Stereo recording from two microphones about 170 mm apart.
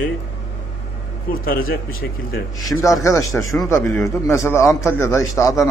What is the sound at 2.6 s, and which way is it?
A man's voice, 20° left (ahead or behind).